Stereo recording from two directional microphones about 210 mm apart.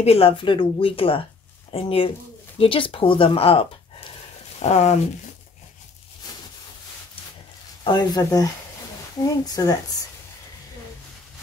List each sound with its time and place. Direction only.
0.0 s speech: 25° left (ahead or behind)
7.8 s speech: 20° left (ahead or behind)